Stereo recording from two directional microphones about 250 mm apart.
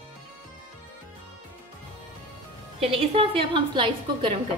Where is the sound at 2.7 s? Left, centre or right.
Right.